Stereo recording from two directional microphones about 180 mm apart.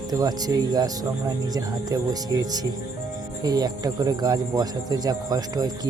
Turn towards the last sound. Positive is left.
turn(degrees=-20)  # may be behind; listen again after turning